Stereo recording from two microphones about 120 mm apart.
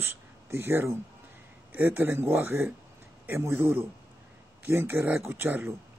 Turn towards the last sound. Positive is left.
turn(degrees=-15)  # may be behind; listen again after turning